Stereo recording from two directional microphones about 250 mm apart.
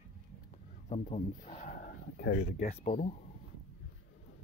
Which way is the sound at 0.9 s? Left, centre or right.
Left.